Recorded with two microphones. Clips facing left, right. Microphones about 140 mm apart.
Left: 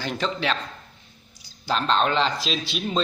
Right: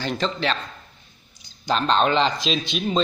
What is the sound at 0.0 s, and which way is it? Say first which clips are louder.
A man's voice: right 2 dB; 10° left (ahead or behind).